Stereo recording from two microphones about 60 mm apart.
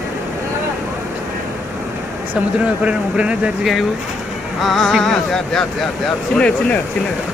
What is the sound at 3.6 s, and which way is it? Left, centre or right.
Speech, centre.